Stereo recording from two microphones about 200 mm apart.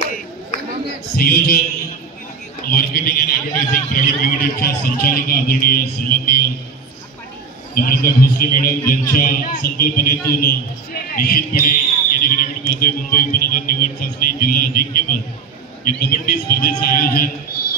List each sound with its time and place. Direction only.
1.1 s a man's voice: 50° left (ahead or behind)
2.7 s a man's voice: 50° left (ahead or behind)
7.7 s a man's voice: 45° left (ahead or behind)